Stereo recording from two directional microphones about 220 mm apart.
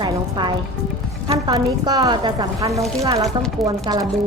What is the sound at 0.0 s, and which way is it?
Music, 20° right (ahead or behind).